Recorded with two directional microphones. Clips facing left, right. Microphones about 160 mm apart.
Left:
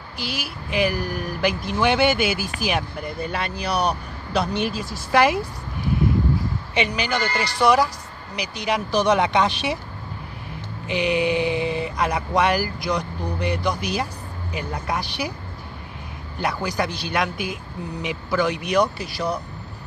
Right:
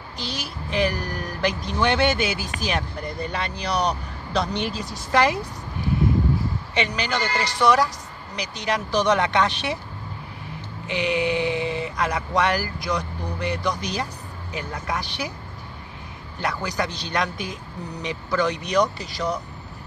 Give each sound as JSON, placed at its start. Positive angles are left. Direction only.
{"t": 0.2, "sound": "speech", "side_deg": 5}
{"t": 6.7, "sound": "speech", "side_deg": 10}
{"t": 10.9, "sound": "speech", "side_deg": 15}
{"t": 11.5, "sound": "speech", "side_deg": -20}
{"t": 12.0, "sound": "speech", "side_deg": 10}
{"t": 16.3, "sound": "speech", "side_deg": 10}